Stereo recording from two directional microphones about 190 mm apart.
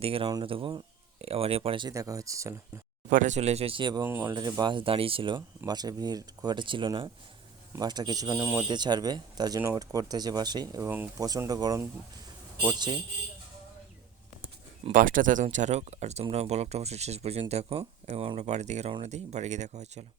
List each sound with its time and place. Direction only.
0.0 s speech: 30° right (ahead or behind)
1.9 s speech: 15° right (ahead or behind)
3.1 s speech: 40° right (ahead or behind); by 13.0 s 20° right (ahead or behind)
14.9 s speech: 45° right (ahead or behind)